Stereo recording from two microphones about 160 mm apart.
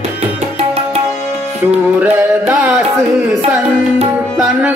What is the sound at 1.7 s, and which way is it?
Music, 10° right (ahead or behind).